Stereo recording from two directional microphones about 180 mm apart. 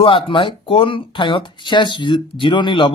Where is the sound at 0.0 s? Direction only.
25° left (ahead or behind).